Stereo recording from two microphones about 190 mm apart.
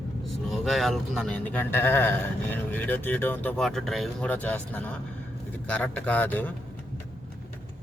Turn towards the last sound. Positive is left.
turn(degrees=10)  # may be behind; listen again after turning